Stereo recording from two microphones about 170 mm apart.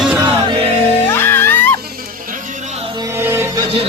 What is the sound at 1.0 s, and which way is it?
Music, 15° left (ahead or behind).